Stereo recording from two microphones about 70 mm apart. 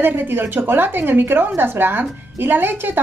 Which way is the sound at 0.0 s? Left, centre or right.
Right.